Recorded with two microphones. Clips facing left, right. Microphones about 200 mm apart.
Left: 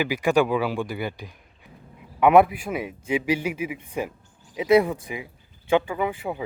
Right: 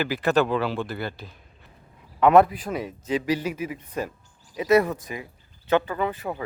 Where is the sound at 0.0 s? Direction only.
10° left (ahead or behind).